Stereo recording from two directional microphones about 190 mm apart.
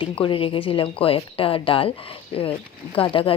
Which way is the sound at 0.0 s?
25° left (ahead or behind).